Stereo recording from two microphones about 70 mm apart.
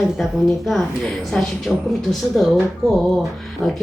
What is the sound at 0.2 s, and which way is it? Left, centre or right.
Speech, centre.